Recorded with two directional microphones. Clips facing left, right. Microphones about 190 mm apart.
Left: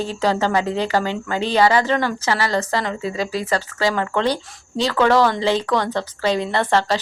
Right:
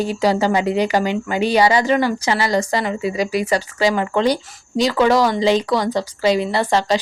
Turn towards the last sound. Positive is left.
turn(degrees=-15)  # may be behind; listen again after turning